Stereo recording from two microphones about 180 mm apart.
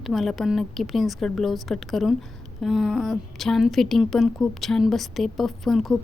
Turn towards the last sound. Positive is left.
turn(degrees=0)  # may be behind; listen again after turning